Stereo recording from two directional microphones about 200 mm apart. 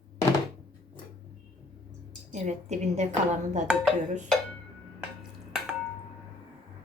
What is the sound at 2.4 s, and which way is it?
Speech, 35° right (ahead or behind).